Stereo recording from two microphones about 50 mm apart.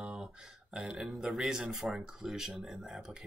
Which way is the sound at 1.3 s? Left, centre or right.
Centre.